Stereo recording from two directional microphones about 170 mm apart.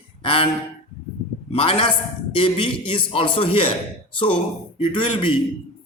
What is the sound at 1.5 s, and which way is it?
A man's voice, 35° left (ahead or behind).